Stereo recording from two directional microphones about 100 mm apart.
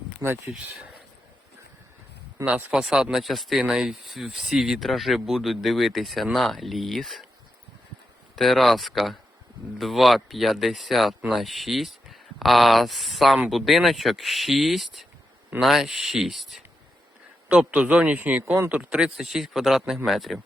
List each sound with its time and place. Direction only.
0.2 s a man's voice: 10° right (ahead or behind)
2.4 s a man's voice: 10° right (ahead or behind)
8.4 s a man's voice: centre (ahead or behind)